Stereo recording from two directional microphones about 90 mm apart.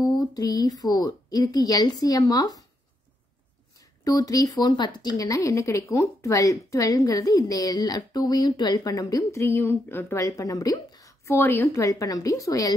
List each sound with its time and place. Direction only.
0.0 s speech: 45° left (ahead or behind)
3.7 s speech: 40° left (ahead or behind)
4.6 s speech: 55° left (ahead or behind)
5.1 s a woman's voice: 40° left (ahead or behind)
11.2 s a woman's voice: 25° left (ahead or behind)
11.8 s a woman's voice: 35° left (ahead or behind)